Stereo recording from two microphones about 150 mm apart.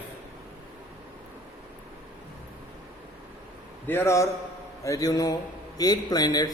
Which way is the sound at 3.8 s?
15° left (ahead or behind).